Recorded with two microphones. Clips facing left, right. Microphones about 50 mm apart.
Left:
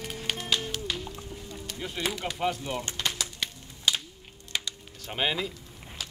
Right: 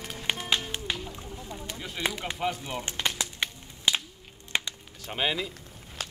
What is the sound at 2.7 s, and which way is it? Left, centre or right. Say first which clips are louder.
Music: right 1 dB; right.